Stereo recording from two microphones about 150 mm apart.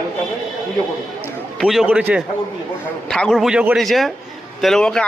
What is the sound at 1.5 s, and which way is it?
Speech, centre (ahead or behind).